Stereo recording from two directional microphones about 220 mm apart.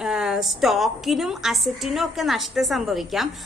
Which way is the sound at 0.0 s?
5° right (ahead or behind).